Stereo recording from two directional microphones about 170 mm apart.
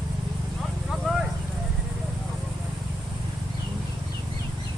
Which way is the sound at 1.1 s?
Centre (ahead or behind).